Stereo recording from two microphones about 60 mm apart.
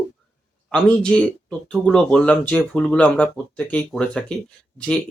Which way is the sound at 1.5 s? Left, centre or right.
Centre.